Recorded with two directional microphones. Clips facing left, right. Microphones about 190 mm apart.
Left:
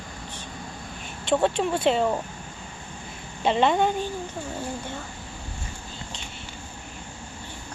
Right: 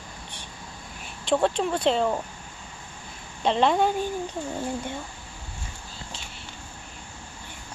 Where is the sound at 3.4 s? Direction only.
Centre (ahead or behind).